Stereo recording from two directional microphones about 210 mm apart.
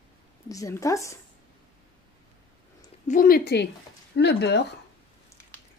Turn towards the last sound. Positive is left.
turn(degrees=55)  # may be behind; listen again after turning